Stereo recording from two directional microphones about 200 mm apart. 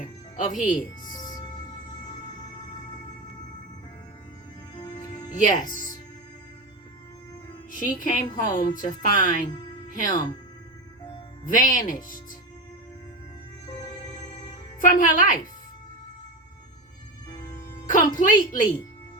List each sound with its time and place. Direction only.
0.5 s speech: 40° left (ahead or behind)
1.0 s music: 20° left (ahead or behind)
4.7 s music: 20° left (ahead or behind)
5.3 s speech: 40° left (ahead or behind)
7.7 s speech: 40° left (ahead or behind)
10.1 s speech: 20° left (ahead or behind)
11.4 s speech: 40° left (ahead or behind)
14.8 s speech: 40° left (ahead or behind)
17.8 s speech: 40° left (ahead or behind)